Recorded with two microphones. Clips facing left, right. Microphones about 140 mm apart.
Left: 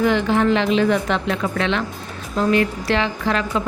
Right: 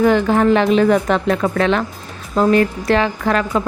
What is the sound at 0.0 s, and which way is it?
A woman's voice, 45° right (ahead or behind).